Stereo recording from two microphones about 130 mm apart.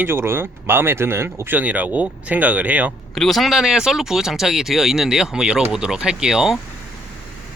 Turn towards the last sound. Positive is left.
turn(degrees=-5)  # may be behind; listen again after turning